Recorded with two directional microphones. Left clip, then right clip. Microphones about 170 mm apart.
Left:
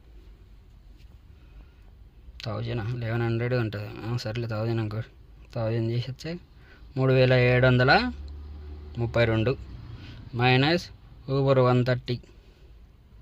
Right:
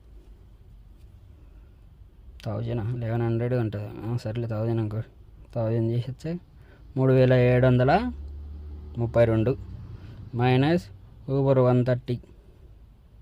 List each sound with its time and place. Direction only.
2.4 s speech: 35° right (ahead or behind)